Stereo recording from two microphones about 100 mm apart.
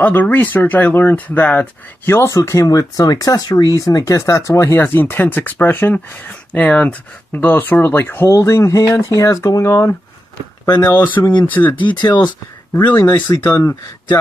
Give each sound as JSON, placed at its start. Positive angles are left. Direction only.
{"t": 0.0, "sound": "speech", "side_deg": 15}
{"t": 11.7, "sound": "speech", "side_deg": 50}
{"t": 12.7, "sound": "speech", "side_deg": 20}